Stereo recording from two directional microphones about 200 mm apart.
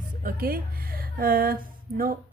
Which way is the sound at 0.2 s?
45° right (ahead or behind).